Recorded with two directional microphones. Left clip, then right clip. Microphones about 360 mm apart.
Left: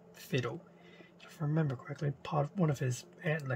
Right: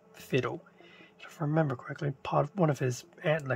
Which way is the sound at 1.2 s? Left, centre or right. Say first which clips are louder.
Right 7 dB; centre.